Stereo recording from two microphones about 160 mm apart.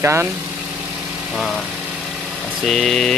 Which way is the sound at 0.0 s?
15° right (ahead or behind).